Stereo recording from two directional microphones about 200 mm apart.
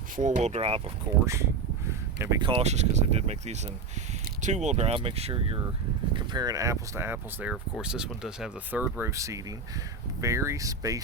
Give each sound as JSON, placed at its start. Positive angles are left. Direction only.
{"t": 0.2, "sound": "speech", "side_deg": -35}
{"t": 1.9, "sound": "a sound", "side_deg": -15}
{"t": 2.4, "sound": "speech", "side_deg": -30}